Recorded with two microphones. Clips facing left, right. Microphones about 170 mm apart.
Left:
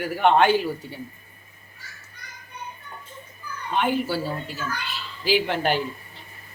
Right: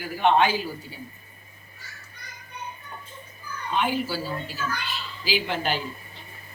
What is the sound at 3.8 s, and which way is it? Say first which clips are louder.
Speech: left 5 dB; 60° left (ahead or behind).